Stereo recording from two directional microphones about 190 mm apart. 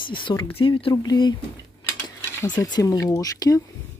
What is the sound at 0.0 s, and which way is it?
Speech, 25° left (ahead or behind).